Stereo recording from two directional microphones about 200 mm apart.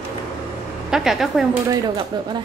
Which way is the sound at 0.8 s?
Centre (ahead or behind).